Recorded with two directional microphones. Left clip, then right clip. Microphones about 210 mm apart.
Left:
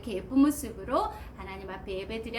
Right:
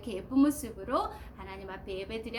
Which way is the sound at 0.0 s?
15° right (ahead or behind).